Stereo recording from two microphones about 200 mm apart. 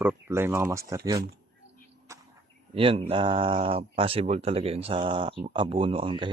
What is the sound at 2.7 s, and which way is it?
Speech, 25° right (ahead or behind).